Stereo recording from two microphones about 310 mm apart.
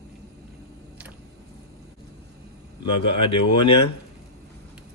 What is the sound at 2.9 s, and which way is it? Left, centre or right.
Speech, left.